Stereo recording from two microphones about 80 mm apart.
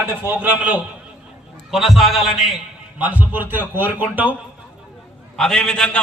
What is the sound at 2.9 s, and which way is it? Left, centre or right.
A man's voice, centre.